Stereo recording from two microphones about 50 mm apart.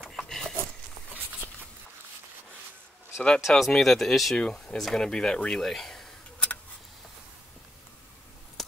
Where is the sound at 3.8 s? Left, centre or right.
Centre.